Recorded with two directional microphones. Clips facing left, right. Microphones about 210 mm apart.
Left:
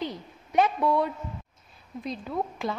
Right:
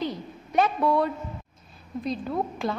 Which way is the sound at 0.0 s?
20° left (ahead or behind).